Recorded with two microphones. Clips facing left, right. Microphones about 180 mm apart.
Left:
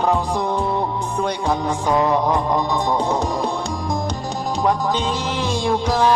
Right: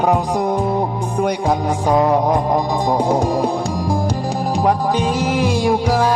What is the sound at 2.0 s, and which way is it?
Music, 35° right (ahead or behind).